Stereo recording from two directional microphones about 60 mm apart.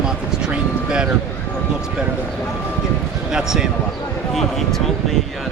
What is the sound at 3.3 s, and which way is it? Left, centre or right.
Speech, centre.